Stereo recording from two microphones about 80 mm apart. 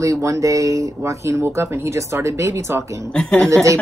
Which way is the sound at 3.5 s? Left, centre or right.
Right.